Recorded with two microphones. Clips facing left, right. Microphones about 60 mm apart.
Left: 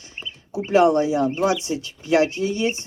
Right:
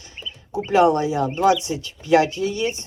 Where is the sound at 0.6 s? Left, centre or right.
Left.